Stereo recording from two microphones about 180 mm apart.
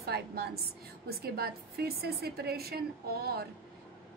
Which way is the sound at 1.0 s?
60° right (ahead or behind).